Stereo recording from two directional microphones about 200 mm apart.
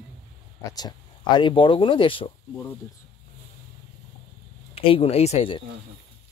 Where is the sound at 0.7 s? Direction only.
20° left (ahead or behind).